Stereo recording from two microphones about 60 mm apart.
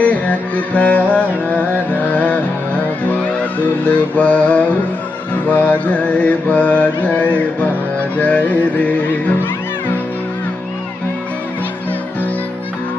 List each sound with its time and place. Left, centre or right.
0.0 s music: left
3.8 s mantra: left